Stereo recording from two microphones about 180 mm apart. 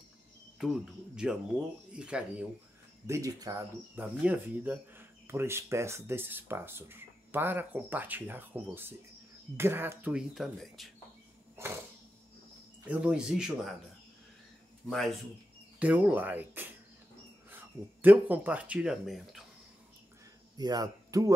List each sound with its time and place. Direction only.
0.6 s speech: 5° right (ahead or behind)
3.1 s speech: 20° right (ahead or behind)
3.9 s speech: 10° right (ahead or behind)
12.8 s speech: 5° right (ahead or behind)
14.9 s speech: centre (ahead or behind)
15.8 s speech: 10° right (ahead or behind)
20.5 s speech: 20° right (ahead or behind)